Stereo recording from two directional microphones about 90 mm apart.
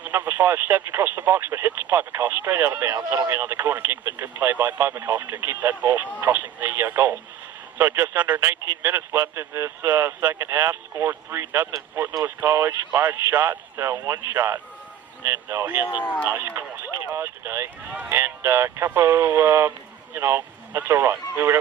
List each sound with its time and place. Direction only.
0.0 s speech: 25° right (ahead or behind)
8.4 s speech: 30° right (ahead or behind)
16.0 s speech: 15° left (ahead or behind)
16.5 s speech: 25° right (ahead or behind)